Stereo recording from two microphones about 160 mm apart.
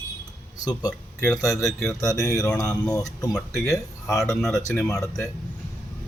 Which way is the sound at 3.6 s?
20° left (ahead or behind).